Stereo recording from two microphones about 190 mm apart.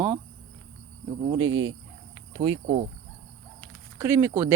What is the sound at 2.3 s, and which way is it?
Insect, 25° right (ahead or behind).